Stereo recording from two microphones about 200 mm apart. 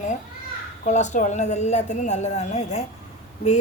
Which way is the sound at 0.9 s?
35° left (ahead or behind).